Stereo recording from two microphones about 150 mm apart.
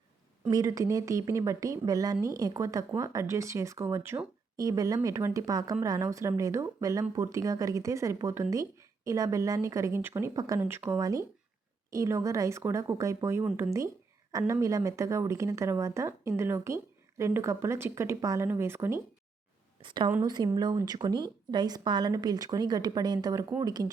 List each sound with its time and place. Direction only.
0.5 s a woman's voice: 25° right (ahead or behind)
19.8 s a woman's voice: 35° right (ahead or behind)